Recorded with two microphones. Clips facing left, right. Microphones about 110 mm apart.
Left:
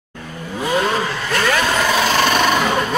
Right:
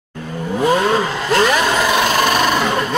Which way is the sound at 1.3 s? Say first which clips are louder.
Right 4 dB; 20° right (ahead or behind).